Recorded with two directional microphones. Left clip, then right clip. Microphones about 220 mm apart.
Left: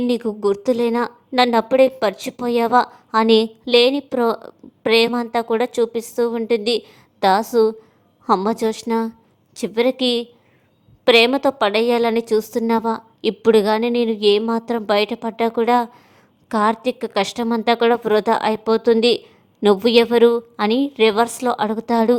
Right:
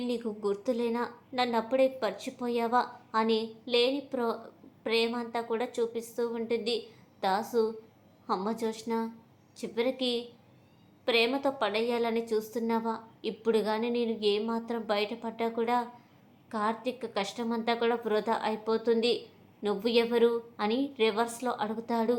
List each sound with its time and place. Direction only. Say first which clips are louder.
0.1 s a woman's voice: left 10 dB; 50° left (ahead or behind)